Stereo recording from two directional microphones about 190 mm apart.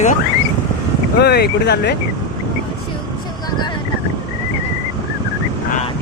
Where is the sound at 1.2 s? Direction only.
60° left (ahead or behind).